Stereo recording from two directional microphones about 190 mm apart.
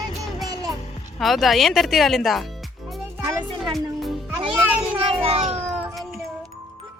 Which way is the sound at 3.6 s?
Centre (ahead or behind).